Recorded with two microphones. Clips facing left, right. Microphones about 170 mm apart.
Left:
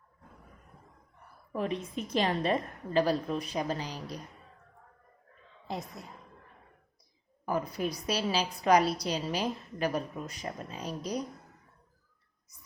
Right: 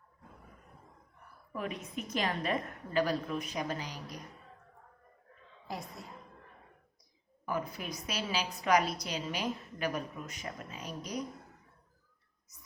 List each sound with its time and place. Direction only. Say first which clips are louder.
1.5 s a woman's voice: left 5 dB; 30° left (ahead or behind)
5.6 s a woman's voice: left 3 dB; 20° left (ahead or behind)
7.4 s a woman's voice: left 5 dB; 35° left (ahead or behind)